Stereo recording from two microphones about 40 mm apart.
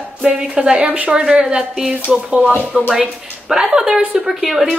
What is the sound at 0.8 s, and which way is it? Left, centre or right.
Speech, right.